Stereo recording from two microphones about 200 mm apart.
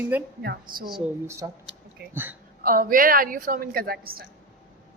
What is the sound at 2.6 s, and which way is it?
A woman's voice, 45° right (ahead or behind).